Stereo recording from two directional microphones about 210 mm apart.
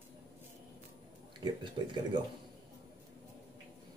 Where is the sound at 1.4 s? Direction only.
20° right (ahead or behind).